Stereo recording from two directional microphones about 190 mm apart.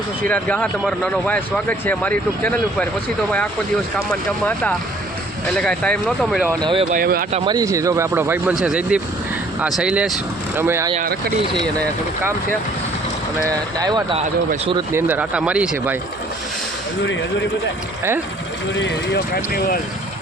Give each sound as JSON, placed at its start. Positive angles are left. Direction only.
{"t": 0.3, "sound": "speech", "side_deg": 5}
{"t": 5.5, "sound": "speech", "side_deg": 5}
{"t": 6.6, "sound": "speech", "side_deg": -25}
{"t": 6.9, "sound": "speech", "side_deg": -50}
{"t": 7.3, "sound": "speech", "side_deg": -20}
{"t": 10.9, "sound": "speech", "side_deg": -50}
{"t": 13.5, "sound": "speech", "side_deg": -20}
{"t": 14.9, "sound": "speech", "side_deg": -10}
{"t": 18.8, "sound": "speech", "side_deg": 65}